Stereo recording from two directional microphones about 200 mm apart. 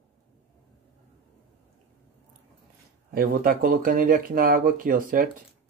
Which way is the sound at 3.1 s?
45° right (ahead or behind).